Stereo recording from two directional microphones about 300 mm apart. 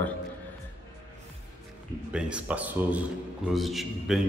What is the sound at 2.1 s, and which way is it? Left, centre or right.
Speech, centre.